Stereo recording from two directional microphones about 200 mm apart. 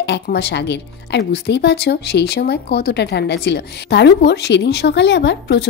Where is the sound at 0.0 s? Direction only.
55° left (ahead or behind).